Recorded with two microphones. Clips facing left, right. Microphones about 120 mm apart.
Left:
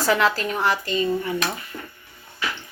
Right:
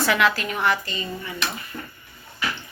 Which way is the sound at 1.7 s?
15° left (ahead or behind).